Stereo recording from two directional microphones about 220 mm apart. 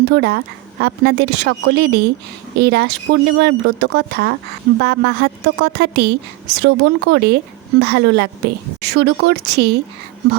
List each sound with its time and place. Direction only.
0.0 s speech: 50° right (ahead or behind)